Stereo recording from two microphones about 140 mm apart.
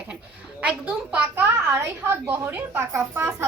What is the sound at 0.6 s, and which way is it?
A woman's voice, 10° right (ahead or behind).